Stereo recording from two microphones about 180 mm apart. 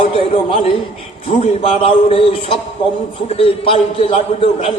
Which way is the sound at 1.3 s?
35° left (ahead or behind).